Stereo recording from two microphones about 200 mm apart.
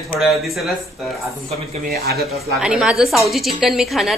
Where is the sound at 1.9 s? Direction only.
50° right (ahead or behind).